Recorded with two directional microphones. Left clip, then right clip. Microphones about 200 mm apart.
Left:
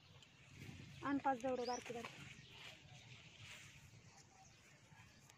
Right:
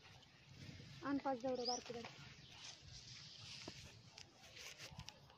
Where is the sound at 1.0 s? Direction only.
Centre (ahead or behind).